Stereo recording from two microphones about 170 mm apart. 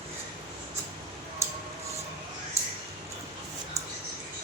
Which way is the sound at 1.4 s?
15° right (ahead or behind).